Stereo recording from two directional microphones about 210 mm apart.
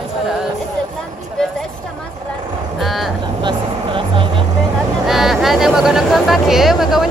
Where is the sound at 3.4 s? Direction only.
25° right (ahead or behind).